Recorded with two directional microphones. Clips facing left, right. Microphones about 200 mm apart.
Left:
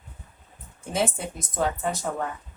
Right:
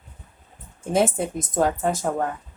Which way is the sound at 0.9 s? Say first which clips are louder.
Right 6 dB; 50° right (ahead or behind).